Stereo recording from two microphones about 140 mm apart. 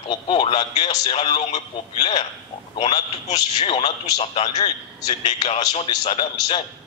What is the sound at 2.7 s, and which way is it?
A man's voice, 45° left (ahead or behind).